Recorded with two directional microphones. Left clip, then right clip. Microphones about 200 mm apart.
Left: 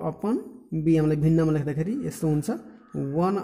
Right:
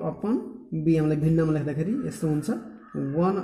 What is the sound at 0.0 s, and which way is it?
Speech, 50° left (ahead or behind).